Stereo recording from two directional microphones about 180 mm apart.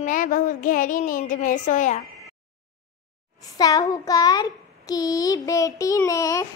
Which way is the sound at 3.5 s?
20° left (ahead or behind).